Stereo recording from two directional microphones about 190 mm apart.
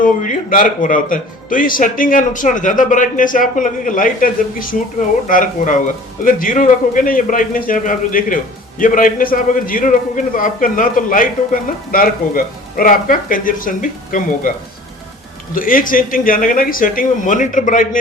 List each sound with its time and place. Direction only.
0.5 s a man's voice: 45° left (ahead or behind)
15.5 s a man's voice: 45° left (ahead or behind)